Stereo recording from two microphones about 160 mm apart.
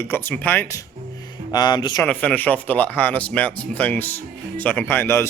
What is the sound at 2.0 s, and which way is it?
Speech, 5° left (ahead or behind).